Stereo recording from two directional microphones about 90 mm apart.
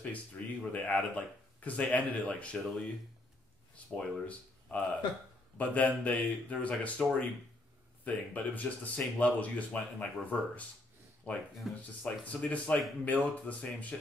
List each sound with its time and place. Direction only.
0.0 s speech: 15° left (ahead or behind)
11.6 s speech: 5° right (ahead or behind)
12.0 s speech: 15° left (ahead or behind)